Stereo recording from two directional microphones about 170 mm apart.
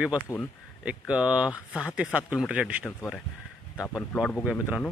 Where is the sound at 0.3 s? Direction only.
15° left (ahead or behind).